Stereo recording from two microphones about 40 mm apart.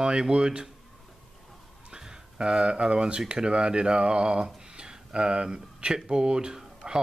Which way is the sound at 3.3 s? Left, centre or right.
Right.